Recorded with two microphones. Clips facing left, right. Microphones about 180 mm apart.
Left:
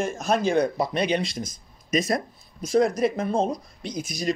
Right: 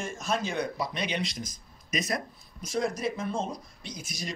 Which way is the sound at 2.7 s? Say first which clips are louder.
Left 9 dB; 60° left (ahead or behind).